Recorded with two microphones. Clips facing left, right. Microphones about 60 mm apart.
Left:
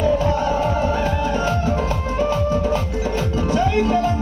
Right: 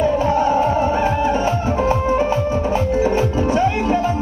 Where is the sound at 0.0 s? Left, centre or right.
Right.